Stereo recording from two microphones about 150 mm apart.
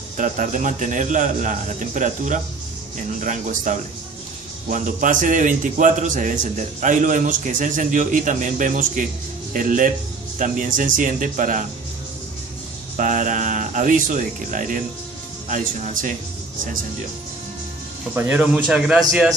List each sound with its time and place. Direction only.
0.2 s a man's voice: 60° right (ahead or behind)
12.9 s a man's voice: 60° right (ahead or behind)
18.1 s a man's voice: 10° right (ahead or behind)